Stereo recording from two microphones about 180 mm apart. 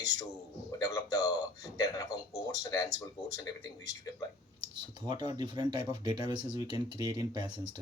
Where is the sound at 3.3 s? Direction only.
20° left (ahead or behind).